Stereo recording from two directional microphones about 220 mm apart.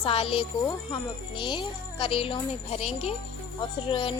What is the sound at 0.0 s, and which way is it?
A woman's voice, 25° left (ahead or behind).